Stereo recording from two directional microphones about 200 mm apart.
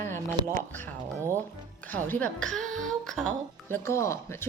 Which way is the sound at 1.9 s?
10° left (ahead or behind).